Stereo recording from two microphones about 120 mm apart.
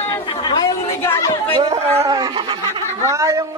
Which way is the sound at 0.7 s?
25° left (ahead or behind).